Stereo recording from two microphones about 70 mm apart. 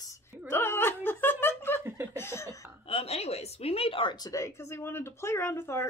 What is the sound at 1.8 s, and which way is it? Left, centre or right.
Chuckle, right.